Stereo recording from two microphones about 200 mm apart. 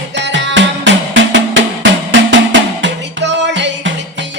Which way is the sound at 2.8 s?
60° right (ahead or behind).